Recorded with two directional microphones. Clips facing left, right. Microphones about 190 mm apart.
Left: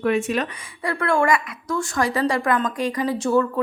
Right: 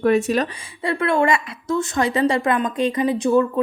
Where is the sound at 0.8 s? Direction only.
25° right (ahead or behind).